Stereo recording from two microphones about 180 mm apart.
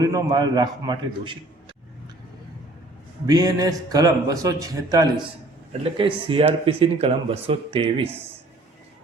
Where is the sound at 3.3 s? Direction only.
20° right (ahead or behind).